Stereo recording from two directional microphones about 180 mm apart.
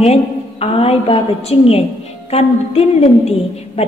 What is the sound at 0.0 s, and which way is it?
A woman's voice, 35° left (ahead or behind).